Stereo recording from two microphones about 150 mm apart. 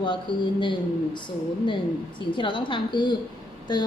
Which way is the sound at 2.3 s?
35° left (ahead or behind).